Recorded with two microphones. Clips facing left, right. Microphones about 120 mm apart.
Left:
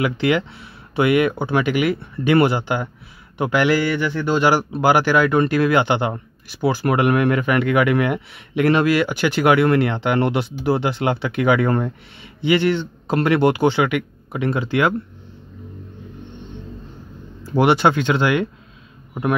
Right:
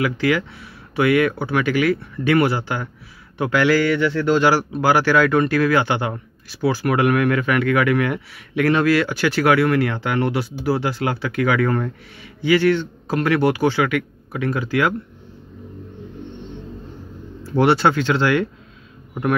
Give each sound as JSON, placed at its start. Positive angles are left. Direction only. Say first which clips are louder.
{"t": 0.0, "sound": "a man's voice", "louder": "left 1 dB", "side_deg": 25}
{"t": 17.4, "sound": "a man's voice", "louder": "even", "side_deg": 15}